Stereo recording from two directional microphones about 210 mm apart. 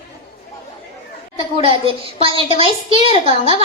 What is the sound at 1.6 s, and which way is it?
A woman's voice, 25° right (ahead or behind).